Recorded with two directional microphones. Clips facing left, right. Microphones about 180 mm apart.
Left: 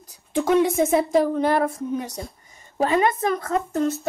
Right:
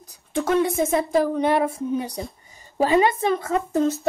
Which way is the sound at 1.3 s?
15° right (ahead or behind).